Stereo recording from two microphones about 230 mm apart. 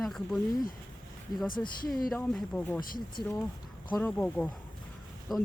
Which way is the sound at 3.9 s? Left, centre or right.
Centre.